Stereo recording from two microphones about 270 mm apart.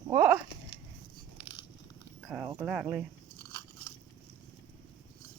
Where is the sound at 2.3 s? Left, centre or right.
Centre.